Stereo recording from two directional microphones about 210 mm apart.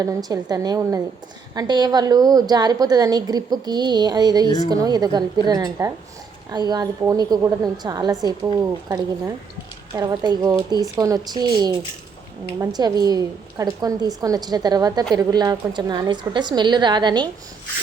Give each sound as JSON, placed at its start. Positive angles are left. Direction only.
{"t": 0.0, "sound": "a woman's voice", "side_deg": -15}